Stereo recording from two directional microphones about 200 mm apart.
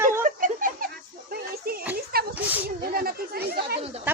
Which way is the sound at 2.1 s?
50° right (ahead or behind).